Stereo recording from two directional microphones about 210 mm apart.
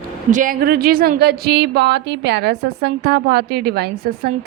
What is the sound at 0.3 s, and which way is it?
A woman's voice, 40° right (ahead or behind).